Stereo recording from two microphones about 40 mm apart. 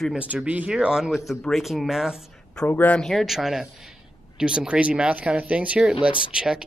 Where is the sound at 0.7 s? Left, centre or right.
Centre.